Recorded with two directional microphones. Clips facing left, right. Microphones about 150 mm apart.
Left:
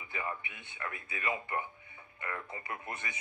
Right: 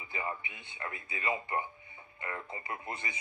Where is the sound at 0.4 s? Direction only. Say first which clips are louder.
Right 1 dB; 55° left (ahead or behind).